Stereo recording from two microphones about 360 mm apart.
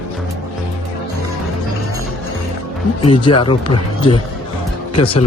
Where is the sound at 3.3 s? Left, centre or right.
Left.